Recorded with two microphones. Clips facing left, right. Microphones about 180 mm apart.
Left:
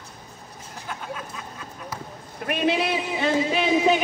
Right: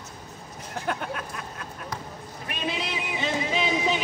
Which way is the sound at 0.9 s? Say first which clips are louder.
Right 3 dB; 65° right (ahead or behind).